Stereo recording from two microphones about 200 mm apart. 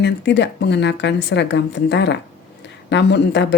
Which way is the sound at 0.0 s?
60° left (ahead or behind).